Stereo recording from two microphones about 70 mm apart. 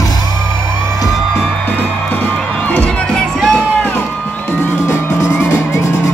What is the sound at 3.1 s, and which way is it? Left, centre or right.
Music, centre.